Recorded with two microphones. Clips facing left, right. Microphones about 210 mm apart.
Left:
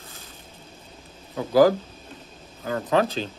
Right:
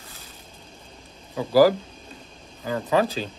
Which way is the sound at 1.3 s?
Centre (ahead or behind).